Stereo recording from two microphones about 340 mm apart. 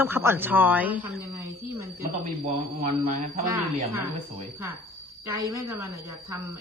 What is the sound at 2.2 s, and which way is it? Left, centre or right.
Speech, right.